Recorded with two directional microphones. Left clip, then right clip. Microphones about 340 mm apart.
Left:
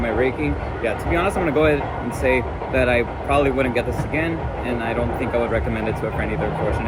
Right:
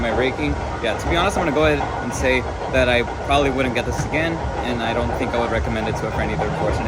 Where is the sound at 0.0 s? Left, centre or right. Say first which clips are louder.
Right 1 dB; centre.